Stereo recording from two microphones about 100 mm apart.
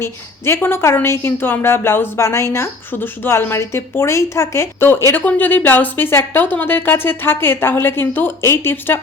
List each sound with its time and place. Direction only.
0.0 s a woman's voice: 25° left (ahead or behind)